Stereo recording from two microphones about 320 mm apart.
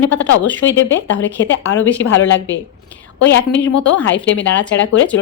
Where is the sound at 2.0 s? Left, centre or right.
Left.